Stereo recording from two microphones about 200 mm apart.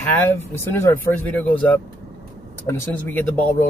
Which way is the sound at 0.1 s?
10° left (ahead or behind).